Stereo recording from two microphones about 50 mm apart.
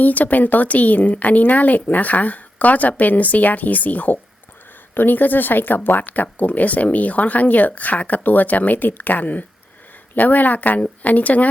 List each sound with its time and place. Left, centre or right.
0.0 s speech: left